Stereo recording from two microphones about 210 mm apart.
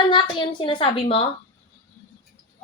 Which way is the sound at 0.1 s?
20° left (ahead or behind).